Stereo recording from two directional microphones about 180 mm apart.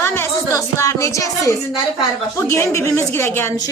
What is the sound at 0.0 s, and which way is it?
A woman's voice, 15° left (ahead or behind).